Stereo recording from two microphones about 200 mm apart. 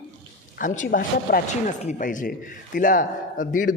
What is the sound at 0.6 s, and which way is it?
Speech, 40° left (ahead or behind).